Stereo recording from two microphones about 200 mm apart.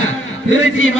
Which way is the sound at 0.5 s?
75° left (ahead or behind).